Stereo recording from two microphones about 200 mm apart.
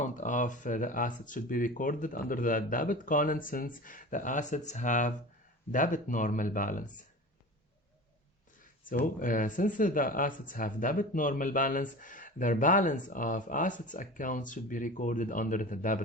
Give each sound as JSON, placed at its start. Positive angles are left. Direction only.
{"t": 0.0, "sound": "speech", "side_deg": 40}
{"t": 9.1, "sound": "speech", "side_deg": 40}